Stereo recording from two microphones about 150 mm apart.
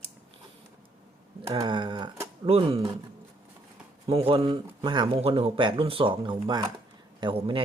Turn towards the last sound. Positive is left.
turn(degrees=-35)  # may be behind; listen again after turning